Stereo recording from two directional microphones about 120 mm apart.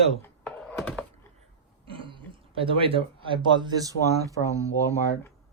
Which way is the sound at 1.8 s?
45° right (ahead or behind).